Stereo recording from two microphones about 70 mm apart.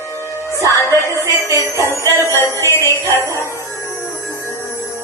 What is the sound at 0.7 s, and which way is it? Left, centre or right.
Music, left.